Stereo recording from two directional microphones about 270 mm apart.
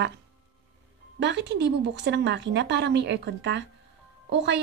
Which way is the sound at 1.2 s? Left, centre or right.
Right.